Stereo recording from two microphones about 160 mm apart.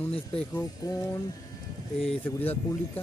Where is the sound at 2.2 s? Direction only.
10° left (ahead or behind).